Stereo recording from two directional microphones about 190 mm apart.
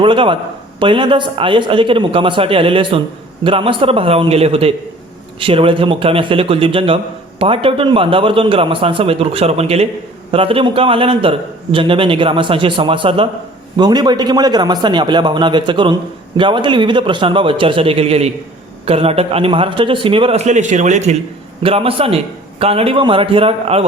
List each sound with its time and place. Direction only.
0.0 s a man's voice: 25° right (ahead or behind)